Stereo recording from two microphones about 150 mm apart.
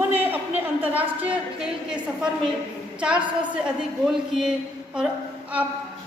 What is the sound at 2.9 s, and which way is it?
A woman's voice, 5° right (ahead or behind).